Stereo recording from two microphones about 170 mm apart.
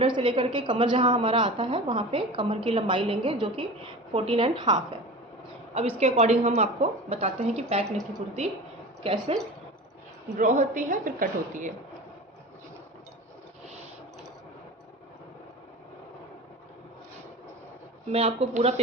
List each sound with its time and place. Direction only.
0.0 s a woman's voice: 30° right (ahead or behind)
9.0 s a woman's voice: 30° right (ahead or behind)
10.3 s a woman's voice: 45° right (ahead or behind)
18.1 s a woman's voice: 35° right (ahead or behind)